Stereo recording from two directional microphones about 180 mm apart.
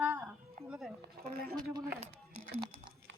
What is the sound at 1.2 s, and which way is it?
Speech, 60° right (ahead or behind).